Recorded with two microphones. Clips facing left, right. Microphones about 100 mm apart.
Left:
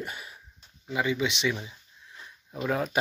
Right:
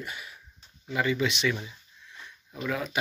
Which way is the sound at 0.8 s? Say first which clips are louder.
Right 1 dB; 15° left (ahead or behind).